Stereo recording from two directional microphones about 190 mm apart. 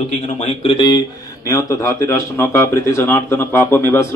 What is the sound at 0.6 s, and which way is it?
Speech, 25° left (ahead or behind).